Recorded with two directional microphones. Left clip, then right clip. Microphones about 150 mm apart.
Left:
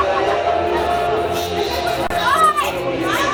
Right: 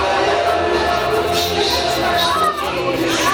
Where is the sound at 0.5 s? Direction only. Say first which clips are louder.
Right 1 dB; 25° right (ahead or behind).